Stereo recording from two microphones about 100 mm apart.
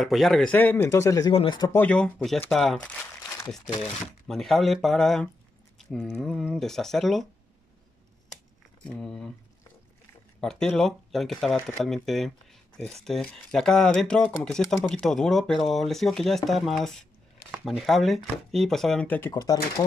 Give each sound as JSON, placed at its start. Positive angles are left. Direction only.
{"t": 0.0, "sound": "speech", "side_deg": 0}
{"t": 0.5, "sound": "speech", "side_deg": 15}
{"t": 1.7, "sound": "speech", "side_deg": 20}
{"t": 2.0, "sound": "speech", "side_deg": 5}
{"t": 4.3, "sound": "speech", "side_deg": 0}
{"t": 9.0, "sound": "speech", "side_deg": 5}
{"t": 10.4, "sound": "speech", "side_deg": 5}
{"t": 19.0, "sound": "speech", "side_deg": 20}
{"t": 19.3, "sound": "speech", "side_deg": 40}